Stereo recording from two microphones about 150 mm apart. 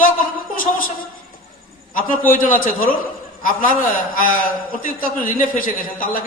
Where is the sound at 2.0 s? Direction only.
65° left (ahead or behind).